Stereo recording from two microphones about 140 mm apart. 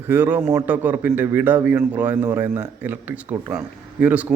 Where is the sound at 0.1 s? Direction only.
15° right (ahead or behind).